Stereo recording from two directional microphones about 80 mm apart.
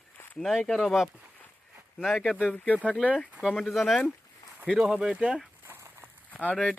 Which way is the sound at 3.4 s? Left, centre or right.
Centre.